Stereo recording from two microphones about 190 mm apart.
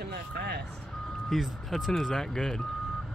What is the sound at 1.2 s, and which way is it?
Speech, centre (ahead or behind).